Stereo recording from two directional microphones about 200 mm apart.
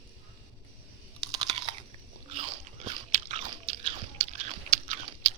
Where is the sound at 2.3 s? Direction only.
30° right (ahead or behind).